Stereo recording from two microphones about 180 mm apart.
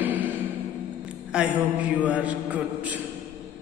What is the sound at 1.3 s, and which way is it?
A man's voice, 5° right (ahead or behind).